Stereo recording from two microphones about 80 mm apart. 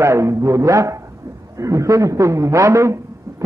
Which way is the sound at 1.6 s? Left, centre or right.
Right.